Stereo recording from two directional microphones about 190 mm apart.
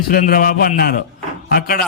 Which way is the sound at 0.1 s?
50° left (ahead or behind).